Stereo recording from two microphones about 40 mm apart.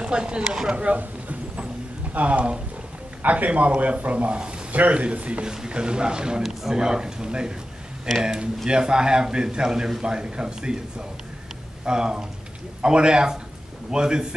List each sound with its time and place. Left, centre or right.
0.0 s a man's voice: right
2.1 s a man's voice: right
3.2 s a man's voice: right
5.5 s a man's voice: centre